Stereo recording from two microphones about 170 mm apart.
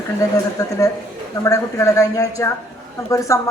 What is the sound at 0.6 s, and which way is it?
Speech, 20° left (ahead or behind).